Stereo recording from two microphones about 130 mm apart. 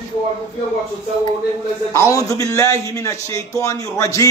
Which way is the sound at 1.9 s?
25° left (ahead or behind).